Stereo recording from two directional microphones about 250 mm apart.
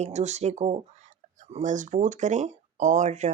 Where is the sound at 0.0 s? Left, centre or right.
Right.